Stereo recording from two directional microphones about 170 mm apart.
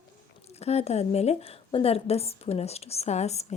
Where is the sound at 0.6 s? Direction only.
40° left (ahead or behind).